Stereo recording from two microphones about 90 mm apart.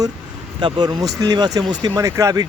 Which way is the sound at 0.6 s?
50° right (ahead or behind).